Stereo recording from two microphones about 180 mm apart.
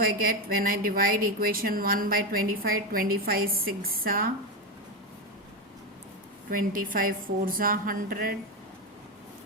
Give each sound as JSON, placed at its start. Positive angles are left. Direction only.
{"t": 0.0, "sound": "speech", "side_deg": -55}
{"t": 6.5, "sound": "speech", "side_deg": -50}